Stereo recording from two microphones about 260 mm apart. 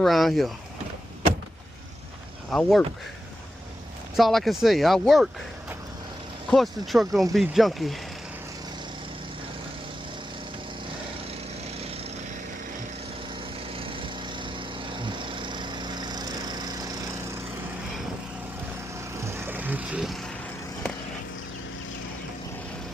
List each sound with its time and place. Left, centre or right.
0.0 s speech: centre
2.5 s speech: centre
4.2 s speech: centre
6.5 s speech: centre
13.7 s lawn mower: right
19.2 s vehicle: centre